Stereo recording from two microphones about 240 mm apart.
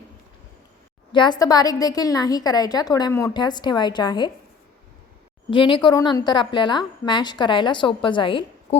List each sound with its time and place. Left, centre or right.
1.1 s a woman's voice: centre
5.5 s a woman's voice: left